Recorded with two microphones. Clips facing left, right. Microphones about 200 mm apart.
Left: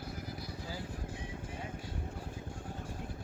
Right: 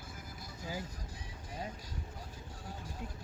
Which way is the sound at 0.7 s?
40° right (ahead or behind).